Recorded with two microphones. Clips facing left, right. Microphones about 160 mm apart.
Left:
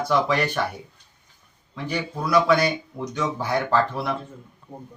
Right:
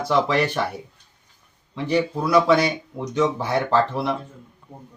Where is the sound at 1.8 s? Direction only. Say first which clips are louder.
Right 7 dB; 25° right (ahead or behind).